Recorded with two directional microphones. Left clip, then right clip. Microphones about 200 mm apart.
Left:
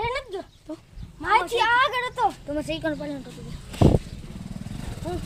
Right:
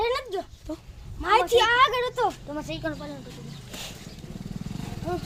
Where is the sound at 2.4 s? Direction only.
45° left (ahead or behind).